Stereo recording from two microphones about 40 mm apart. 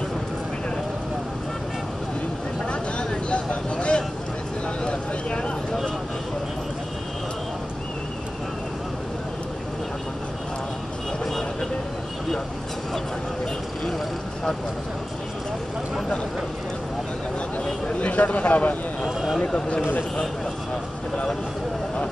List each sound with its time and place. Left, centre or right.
2.6 s vehicle: left
4.8 s a sound: left
17.9 s speech: left